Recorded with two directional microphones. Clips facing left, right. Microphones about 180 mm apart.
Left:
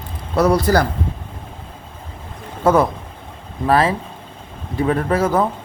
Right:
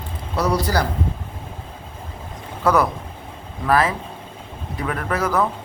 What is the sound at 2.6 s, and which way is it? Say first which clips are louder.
Speech: left 3 dB; 25° left (ahead or behind).